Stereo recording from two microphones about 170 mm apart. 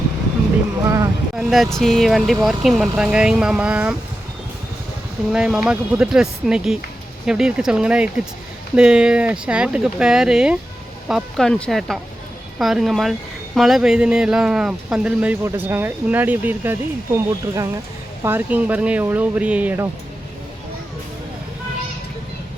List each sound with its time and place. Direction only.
0.9 s a sound: 20° right (ahead or behind)
1.4 s speech: centre (ahead or behind)
5.3 s speech: 5° right (ahead or behind)
17.2 s speech: 20° right (ahead or behind)